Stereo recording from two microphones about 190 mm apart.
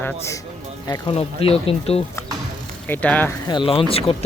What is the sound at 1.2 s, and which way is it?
Speech, 30° left (ahead or behind).